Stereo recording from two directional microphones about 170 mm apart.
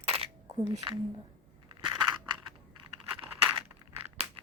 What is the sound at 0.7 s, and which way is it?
Speech, 20° right (ahead or behind).